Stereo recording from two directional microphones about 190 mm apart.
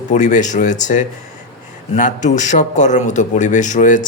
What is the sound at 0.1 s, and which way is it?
A man's voice, 40° left (ahead or behind).